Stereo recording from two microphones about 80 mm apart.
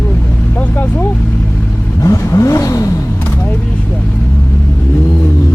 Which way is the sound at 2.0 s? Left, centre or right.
Left.